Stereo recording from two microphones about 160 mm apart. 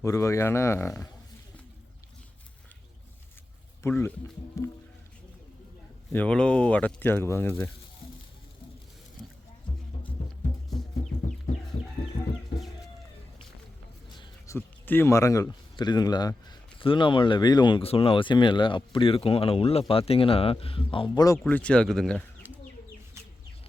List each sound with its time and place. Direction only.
0.0 s speech: 20° left (ahead or behind)
3.8 s speech: 15° left (ahead or behind)
6.1 s speech: 5° left (ahead or behind)
14.4 s speech: 15° left (ahead or behind); by 21.2 s 35° left (ahead or behind)
21.3 s speech: 5° left (ahead or behind)
22.4 s chicken: 10° right (ahead or behind)